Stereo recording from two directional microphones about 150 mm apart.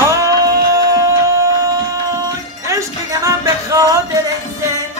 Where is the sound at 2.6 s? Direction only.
20° right (ahead or behind).